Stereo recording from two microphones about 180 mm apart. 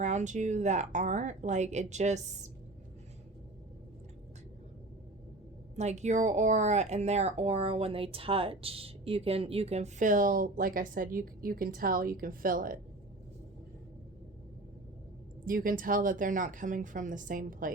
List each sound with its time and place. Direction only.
0.0 s speech: 40° right (ahead or behind)
5.7 s speech: 40° right (ahead or behind)
15.4 s speech: 50° right (ahead or behind)